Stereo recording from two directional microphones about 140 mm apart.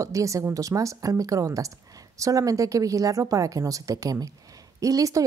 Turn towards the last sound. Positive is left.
turn(degrees=-25)  # may be behind; listen again after turning